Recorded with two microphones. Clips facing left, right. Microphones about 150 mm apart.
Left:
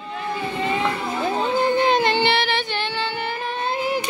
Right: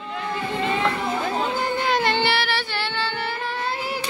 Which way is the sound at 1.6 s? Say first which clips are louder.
Left 6 dB; 20° left (ahead or behind).